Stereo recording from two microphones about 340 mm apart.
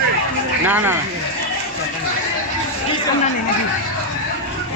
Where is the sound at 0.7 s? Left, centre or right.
Centre.